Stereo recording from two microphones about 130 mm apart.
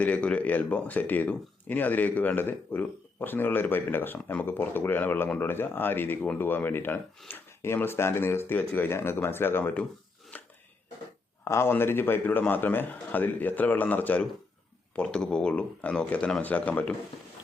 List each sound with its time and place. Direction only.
0.0 s speech: 10° left (ahead or behind)
10.3 s chopping: 10° left (ahead or behind)
11.4 s speech: 20° left (ahead or behind)